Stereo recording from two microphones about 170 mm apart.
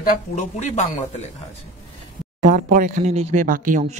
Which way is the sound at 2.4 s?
50° right (ahead or behind).